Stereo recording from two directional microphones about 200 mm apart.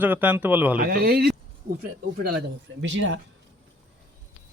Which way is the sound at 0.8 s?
50° right (ahead or behind).